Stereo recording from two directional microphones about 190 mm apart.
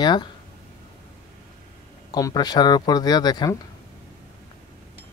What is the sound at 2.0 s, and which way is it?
Speech, 20° left (ahead or behind).